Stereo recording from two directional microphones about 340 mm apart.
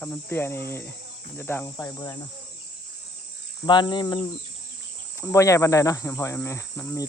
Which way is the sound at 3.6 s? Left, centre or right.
Centre.